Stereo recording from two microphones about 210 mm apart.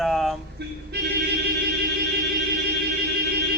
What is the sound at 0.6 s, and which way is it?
Speech, 50° right (ahead or behind).